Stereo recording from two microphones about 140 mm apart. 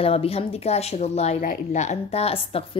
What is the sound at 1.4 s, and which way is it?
A woman's voice, 70° left (ahead or behind).